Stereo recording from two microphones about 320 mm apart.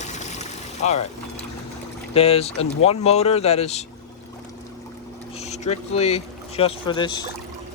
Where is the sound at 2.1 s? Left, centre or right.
Centre.